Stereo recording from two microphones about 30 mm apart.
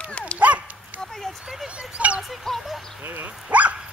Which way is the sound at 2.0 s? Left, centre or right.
Right.